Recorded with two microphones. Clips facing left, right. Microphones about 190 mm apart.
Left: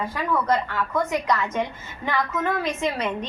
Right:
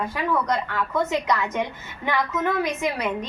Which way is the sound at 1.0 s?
20° right (ahead or behind).